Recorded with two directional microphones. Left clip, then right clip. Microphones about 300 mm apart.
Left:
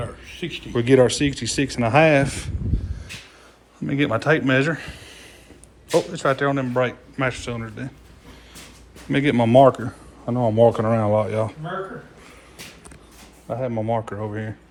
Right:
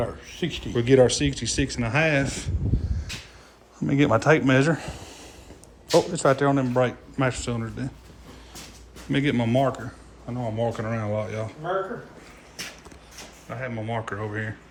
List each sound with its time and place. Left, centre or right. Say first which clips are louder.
0.0 s speech: right 2 dB; right
0.7 s speech: left 2 dB; centre
3.8 s speech: right 1 dB; centre
9.0 s speech: left 5 dB; centre
13.5 s speech: left 7 dB; centre